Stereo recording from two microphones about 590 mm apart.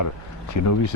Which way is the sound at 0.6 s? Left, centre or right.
Left.